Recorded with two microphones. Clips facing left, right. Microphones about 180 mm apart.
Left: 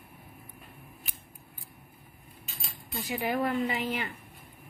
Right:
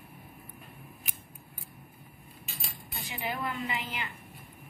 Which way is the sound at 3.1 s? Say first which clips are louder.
Left 6 dB; 50° left (ahead or behind).